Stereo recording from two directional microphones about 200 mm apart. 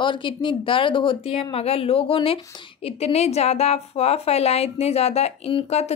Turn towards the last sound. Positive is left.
turn(degrees=30)  # may be behind; listen again after turning